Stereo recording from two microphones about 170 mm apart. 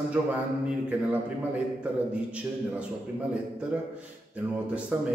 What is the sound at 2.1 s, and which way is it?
Speech, 5° right (ahead or behind).